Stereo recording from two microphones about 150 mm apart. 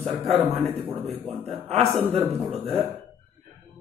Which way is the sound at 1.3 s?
40° right (ahead or behind).